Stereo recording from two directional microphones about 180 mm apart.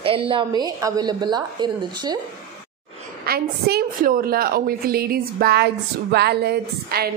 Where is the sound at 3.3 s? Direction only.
60° right (ahead or behind).